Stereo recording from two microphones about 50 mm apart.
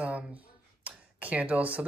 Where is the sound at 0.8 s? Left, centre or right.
Right.